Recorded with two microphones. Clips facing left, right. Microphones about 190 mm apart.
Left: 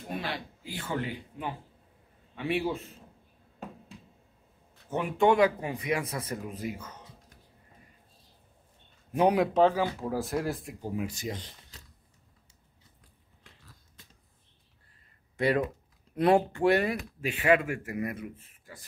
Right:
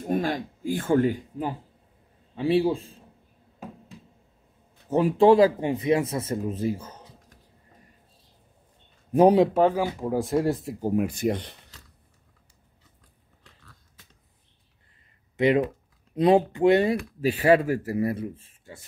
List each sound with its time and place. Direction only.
0.1 s speech: 45° right (ahead or behind)
2.3 s speech: 30° right (ahead or behind)
4.8 s speech: 35° right (ahead or behind)
9.1 s speech: 35° right (ahead or behind)
9.5 s speech: 10° right (ahead or behind)
10.1 s speech: centre (ahead or behind)
10.4 s speech: 25° right (ahead or behind)
10.8 s speech: 50° right (ahead or behind)
15.3 s speech: 20° right (ahead or behind)
17.2 s speech: 35° right (ahead or behind)